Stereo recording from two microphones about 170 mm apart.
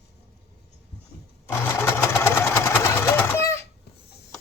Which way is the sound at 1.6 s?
15° left (ahead or behind).